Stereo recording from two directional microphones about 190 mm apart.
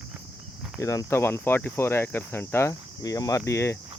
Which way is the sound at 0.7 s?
15° left (ahead or behind).